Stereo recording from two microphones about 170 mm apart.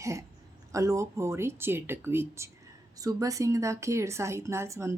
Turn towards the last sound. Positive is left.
turn(degrees=-15)  # may be behind; listen again after turning